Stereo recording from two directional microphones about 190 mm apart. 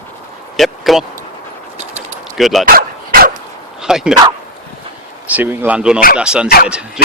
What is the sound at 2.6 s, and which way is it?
Dog, 50° right (ahead or behind).